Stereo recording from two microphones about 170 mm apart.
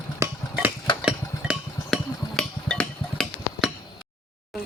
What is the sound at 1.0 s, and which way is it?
Music, 5° right (ahead or behind).